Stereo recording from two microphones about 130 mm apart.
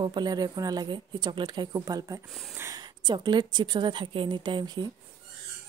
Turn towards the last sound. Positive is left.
turn(degrees=-35)  # may be behind; listen again after turning